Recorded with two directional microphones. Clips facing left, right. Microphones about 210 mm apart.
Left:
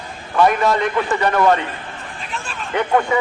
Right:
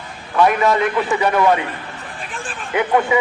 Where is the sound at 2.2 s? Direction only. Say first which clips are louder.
Left 1 dB; 50° right (ahead or behind).